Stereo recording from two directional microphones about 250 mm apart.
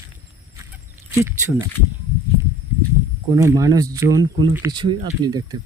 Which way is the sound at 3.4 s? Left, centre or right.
Centre.